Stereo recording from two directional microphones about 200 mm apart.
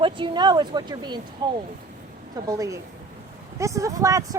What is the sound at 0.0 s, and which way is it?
Speech, 25° right (ahead or behind).